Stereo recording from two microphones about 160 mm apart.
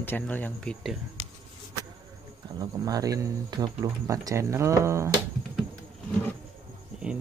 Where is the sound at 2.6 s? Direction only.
25° right (ahead or behind).